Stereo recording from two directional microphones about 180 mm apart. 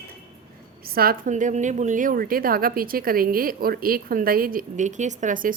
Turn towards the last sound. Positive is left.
turn(degrees=-45)  # may be behind; listen again after turning